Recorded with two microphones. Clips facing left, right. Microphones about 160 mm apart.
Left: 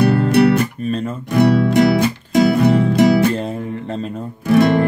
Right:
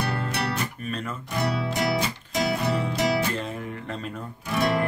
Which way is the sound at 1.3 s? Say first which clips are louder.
Left 14 dB; 60° left (ahead or behind).